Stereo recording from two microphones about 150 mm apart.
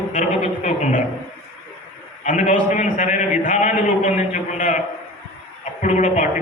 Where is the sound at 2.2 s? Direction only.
55° left (ahead or behind).